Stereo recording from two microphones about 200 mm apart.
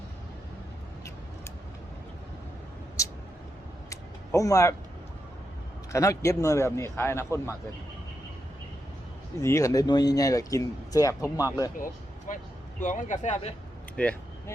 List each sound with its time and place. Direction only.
3.8 s a sound: 15° left (ahead or behind)
5.9 s speech: 15° left (ahead or behind)
9.4 s speech: 15° left (ahead or behind)
12.3 s speech: 40° left (ahead or behind)
13.9 s vehicle: 5° left (ahead or behind)